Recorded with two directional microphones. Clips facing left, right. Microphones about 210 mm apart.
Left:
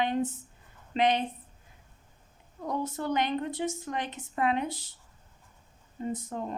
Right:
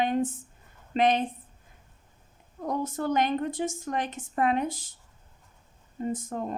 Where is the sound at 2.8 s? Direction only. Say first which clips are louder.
Right 4 dB; 45° right (ahead or behind).